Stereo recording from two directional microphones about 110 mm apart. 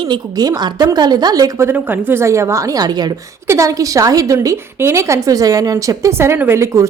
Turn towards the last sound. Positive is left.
turn(degrees=-25)  # may be behind; listen again after turning